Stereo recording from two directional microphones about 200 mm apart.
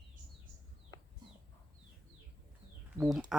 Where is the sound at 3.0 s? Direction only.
5° right (ahead or behind).